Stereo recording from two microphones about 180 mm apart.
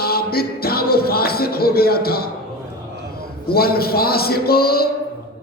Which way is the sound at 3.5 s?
60° left (ahead or behind).